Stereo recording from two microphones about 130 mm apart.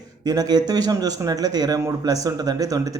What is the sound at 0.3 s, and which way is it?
A man's voice, 30° right (ahead or behind).